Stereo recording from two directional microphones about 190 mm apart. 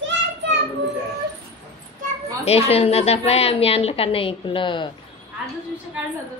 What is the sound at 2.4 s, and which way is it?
A woman's voice, 30° left (ahead or behind).